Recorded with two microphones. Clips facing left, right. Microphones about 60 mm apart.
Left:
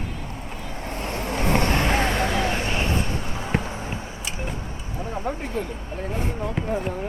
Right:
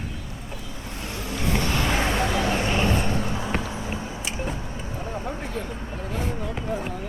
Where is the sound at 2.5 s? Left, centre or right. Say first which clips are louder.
Right 2 dB; right.